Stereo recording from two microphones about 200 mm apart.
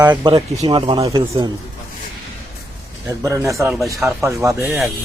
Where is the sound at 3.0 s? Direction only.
15° right (ahead or behind).